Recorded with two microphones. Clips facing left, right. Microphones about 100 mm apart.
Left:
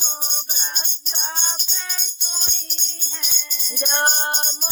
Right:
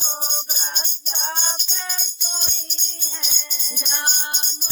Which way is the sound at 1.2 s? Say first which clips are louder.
Right 2 dB; 30° right (ahead or behind).